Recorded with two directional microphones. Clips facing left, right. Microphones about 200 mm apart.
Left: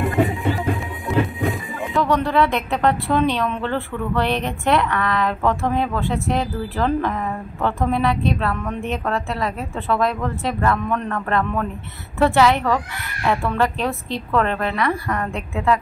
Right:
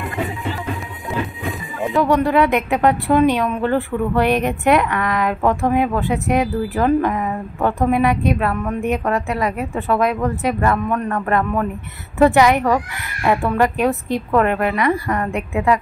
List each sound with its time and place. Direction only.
1.0 s music: centre (ahead or behind)
2.0 s a woman's voice: 15° right (ahead or behind)